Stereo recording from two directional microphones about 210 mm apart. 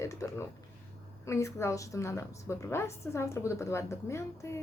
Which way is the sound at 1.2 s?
15° left (ahead or behind).